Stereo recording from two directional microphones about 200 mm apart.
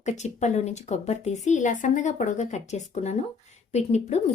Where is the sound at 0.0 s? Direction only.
35° left (ahead or behind).